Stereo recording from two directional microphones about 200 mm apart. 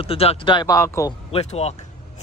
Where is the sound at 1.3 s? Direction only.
30° left (ahead or behind).